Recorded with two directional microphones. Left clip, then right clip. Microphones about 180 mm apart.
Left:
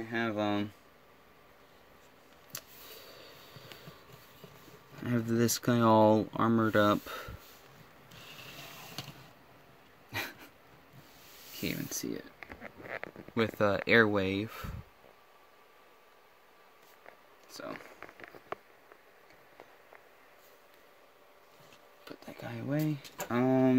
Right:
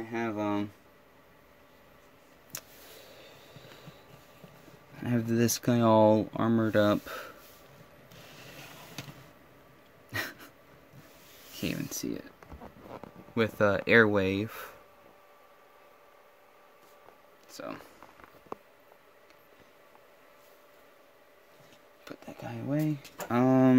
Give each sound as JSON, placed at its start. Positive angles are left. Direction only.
{"t": 0.1, "sound": "speech", "side_deg": 30}
{"t": 5.0, "sound": "speech", "side_deg": 0}
{"t": 10.1, "sound": "a sound", "side_deg": 0}
{"t": 11.6, "sound": "speech", "side_deg": 0}
{"t": 13.3, "sound": "speech", "side_deg": 0}
{"t": 17.5, "sound": "a sound", "side_deg": -5}
{"t": 22.0, "sound": "a sound", "side_deg": -10}
{"t": 22.3, "sound": "speech", "side_deg": 0}
{"t": 23.2, "sound": "speech", "side_deg": -10}